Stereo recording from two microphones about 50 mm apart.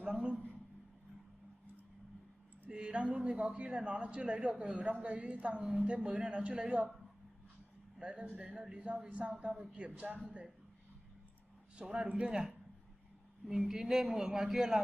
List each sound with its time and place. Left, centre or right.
0.0 s a man's voice: right
2.7 s a man's voice: right
8.0 s a man's voice: centre
11.7 s a man's voice: centre
13.5 s a man's voice: centre